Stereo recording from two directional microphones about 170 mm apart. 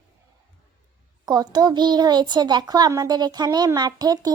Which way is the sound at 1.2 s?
25° right (ahead or behind).